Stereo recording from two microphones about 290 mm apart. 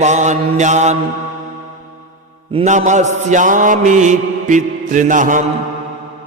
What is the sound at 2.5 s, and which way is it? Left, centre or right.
Mantra, right.